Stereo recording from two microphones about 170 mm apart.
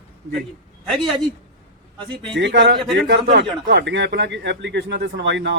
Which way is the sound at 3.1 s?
75° right (ahead or behind).